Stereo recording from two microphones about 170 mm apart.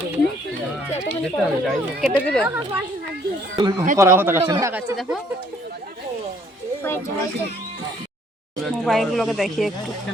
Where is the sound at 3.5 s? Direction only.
25° right (ahead or behind).